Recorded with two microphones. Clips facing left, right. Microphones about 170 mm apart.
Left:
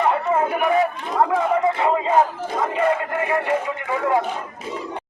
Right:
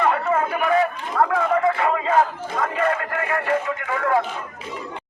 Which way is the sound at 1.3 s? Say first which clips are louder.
Left 1 dB; 20° left (ahead or behind).